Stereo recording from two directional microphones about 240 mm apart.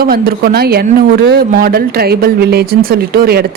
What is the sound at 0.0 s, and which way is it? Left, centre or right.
Speech, right.